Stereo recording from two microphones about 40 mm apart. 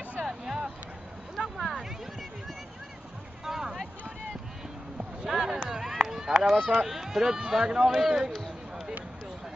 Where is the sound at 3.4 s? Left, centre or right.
Centre.